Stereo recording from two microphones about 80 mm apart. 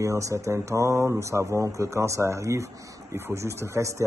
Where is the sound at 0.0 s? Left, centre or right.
Right.